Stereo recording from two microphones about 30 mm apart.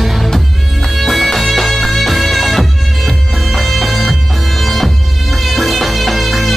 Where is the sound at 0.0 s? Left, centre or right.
Centre.